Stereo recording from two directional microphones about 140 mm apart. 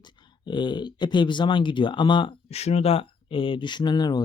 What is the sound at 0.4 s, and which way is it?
Speech, 35° left (ahead or behind).